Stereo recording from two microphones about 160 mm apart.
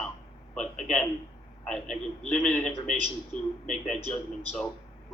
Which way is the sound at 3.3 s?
50° left (ahead or behind).